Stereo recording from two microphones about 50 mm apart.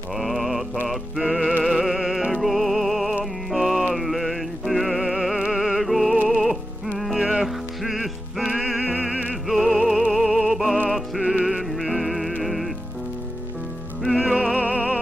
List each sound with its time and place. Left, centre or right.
0.1 s mantra: centre
0.8 s music: centre
7.2 s music: centre
7.4 s music: centre
10.1 s opera: centre
11.2 s music: centre
14.1 s music: centre
14.6 s music: right